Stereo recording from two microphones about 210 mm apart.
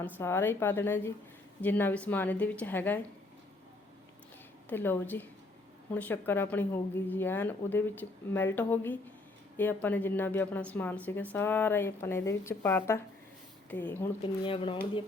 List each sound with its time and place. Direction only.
0.2 s a woman's voice: 10° left (ahead or behind)
4.7 s a woman's voice: 10° left (ahead or behind)
14.4 s speech: 25° left (ahead or behind)